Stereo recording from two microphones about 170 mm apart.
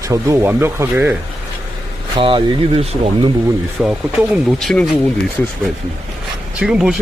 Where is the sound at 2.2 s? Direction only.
30° right (ahead or behind).